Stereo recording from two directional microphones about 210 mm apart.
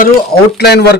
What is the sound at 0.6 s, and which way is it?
Speech, 50° left (ahead or behind).